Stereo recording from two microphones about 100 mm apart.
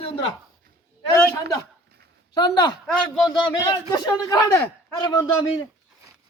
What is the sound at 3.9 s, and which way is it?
A man's voice, 40° left (ahead or behind).